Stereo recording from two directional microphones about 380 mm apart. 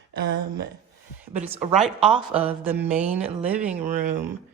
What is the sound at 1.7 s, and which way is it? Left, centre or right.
A man's voice, centre.